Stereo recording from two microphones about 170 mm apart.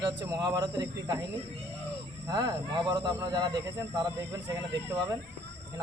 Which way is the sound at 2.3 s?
25° right (ahead or behind).